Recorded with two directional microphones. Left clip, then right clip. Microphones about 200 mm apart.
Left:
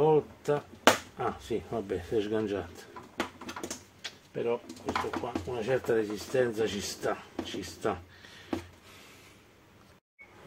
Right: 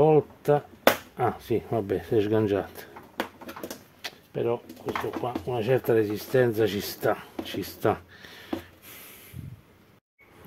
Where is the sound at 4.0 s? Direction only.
50° right (ahead or behind).